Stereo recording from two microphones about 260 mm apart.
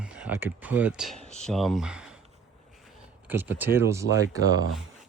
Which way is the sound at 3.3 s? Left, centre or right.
Centre.